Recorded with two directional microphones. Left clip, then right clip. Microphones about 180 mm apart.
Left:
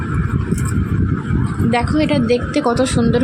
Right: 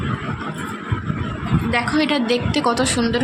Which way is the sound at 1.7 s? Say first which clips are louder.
Left 2 dB; 15° left (ahead or behind).